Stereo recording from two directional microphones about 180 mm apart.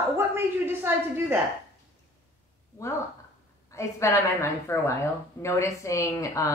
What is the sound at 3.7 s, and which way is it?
Speech, 15° left (ahead or behind).